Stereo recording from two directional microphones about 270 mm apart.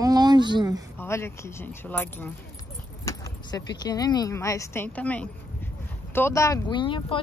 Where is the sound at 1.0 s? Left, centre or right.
Centre.